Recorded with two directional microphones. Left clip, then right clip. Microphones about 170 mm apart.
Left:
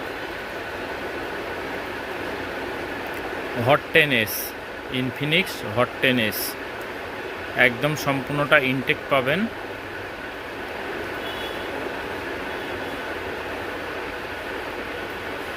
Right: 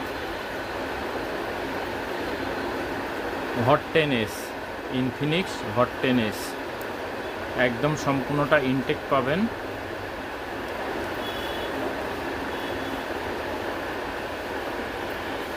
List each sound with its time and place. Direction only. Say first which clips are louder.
3.7 s speech: left 4 dB; 15° left (ahead or behind)
7.6 s speech: left 4 dB; 15° left (ahead or behind)